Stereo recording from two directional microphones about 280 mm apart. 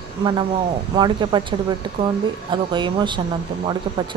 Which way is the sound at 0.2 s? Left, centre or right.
Centre.